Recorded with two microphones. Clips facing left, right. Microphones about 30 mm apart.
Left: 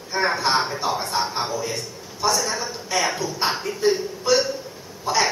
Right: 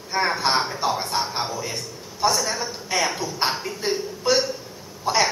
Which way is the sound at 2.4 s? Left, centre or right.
Centre.